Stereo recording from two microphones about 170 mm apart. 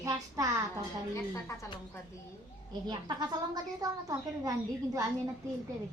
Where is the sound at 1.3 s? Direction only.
15° left (ahead or behind).